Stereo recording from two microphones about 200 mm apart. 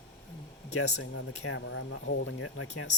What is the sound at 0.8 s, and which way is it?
Speech, 90° left.